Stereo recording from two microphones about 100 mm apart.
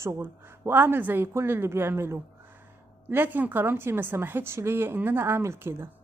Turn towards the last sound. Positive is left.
turn(degrees=-25)  # may be behind; listen again after turning